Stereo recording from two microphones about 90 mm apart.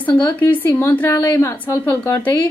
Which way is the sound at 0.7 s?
30° left (ahead or behind).